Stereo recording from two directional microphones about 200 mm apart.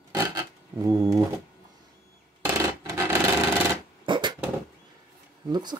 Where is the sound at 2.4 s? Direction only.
10° right (ahead or behind).